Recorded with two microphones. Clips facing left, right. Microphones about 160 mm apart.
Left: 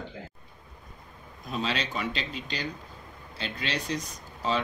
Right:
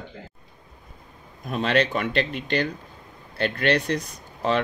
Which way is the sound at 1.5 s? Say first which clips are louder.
Right 9 dB; 55° right (ahead or behind).